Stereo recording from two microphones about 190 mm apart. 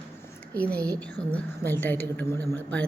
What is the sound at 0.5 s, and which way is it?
A woman's voice, 5° left (ahead or behind).